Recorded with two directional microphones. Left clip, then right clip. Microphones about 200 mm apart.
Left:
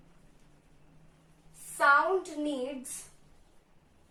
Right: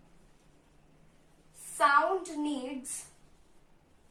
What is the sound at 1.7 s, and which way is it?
Speech, 10° left (ahead or behind).